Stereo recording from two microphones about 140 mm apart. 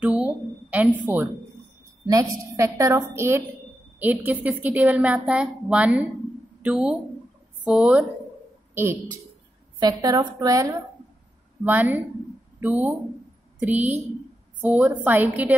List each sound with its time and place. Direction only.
0.0 s a sound: 10° right (ahead or behind)
2.0 s a woman's voice: 25° right (ahead or behind); by 8.0 s 10° right (ahead or behind)
9.8 s a woman's voice: 30° right (ahead or behind)
11.6 s a woman's voice: 10° right (ahead or behind)